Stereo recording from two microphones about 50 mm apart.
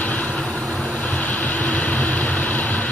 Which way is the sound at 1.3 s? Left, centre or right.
Left.